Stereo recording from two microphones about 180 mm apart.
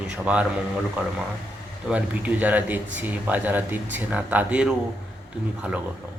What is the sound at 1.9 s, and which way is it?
Speech, 10° right (ahead or behind).